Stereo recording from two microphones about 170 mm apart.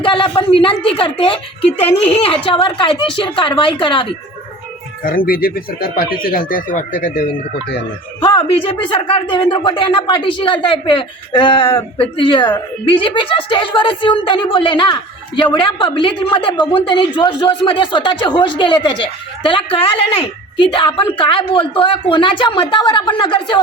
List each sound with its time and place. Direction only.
0.0 s a woman's voice: 30° left (ahead or behind)
5.0 s speech: 55° left (ahead or behind)
8.2 s speech: 30° left (ahead or behind)